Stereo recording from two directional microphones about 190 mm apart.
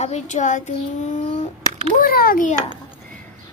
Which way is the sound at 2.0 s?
50° left (ahead or behind).